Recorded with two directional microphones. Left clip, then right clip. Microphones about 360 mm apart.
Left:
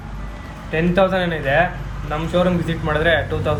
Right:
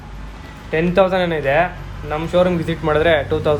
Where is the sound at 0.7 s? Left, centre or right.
Centre.